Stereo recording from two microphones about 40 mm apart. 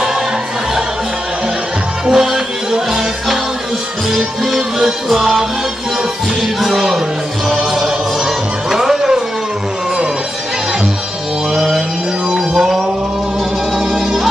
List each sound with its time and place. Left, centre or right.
2.0 s music: centre
4.6 s music: centre
6.4 s music: centre
11.5 s mantra: centre
12.4 s a sound: centre
13.7 s music: centre